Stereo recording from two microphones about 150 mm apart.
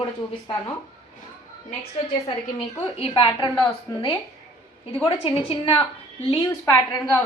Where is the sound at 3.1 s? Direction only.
30° left (ahead or behind).